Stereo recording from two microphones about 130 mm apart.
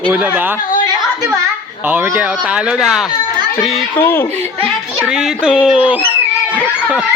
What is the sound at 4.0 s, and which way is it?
Speech, 15° left (ahead or behind).